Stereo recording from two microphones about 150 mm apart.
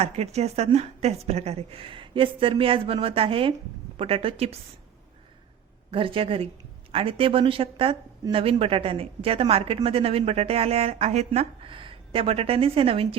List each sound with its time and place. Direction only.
0.0 s speech: 45° right (ahead or behind)
5.9 s speech: 35° right (ahead or behind)